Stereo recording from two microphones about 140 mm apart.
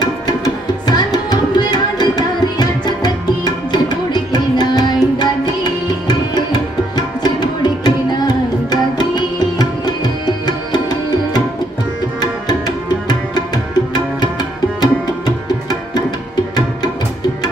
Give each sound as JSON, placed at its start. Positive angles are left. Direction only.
{"t": 0.8, "sound": "tabla", "side_deg": 30}
{"t": 14.8, "sound": "music", "side_deg": 30}